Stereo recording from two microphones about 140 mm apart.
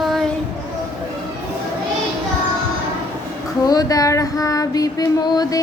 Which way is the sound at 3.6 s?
25° left (ahead or behind).